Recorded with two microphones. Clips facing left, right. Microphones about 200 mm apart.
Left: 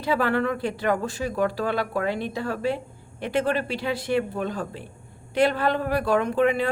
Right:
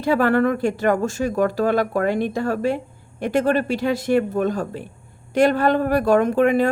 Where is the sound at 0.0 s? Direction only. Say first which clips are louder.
Right 6 dB; 50° right (ahead or behind).